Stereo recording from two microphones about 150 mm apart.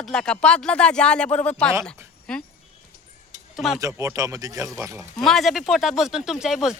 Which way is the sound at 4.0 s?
20° right (ahead or behind).